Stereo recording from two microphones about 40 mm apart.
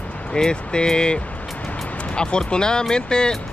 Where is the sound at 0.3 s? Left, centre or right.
Centre.